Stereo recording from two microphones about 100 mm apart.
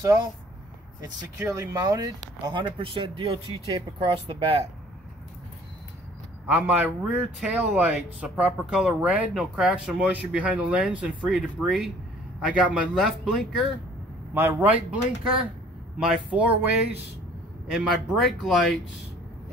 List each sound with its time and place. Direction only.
1.6 s speech: 35° right (ahead or behind)
2.4 s speech: 60° right (ahead or behind)
6.4 s speech: 15° right (ahead or behind)
14.3 s speech: 20° right (ahead or behind)
17.6 s speech: 5° right (ahead or behind)